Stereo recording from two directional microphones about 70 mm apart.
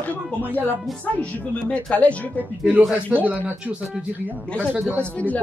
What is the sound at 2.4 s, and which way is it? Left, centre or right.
Speech, right.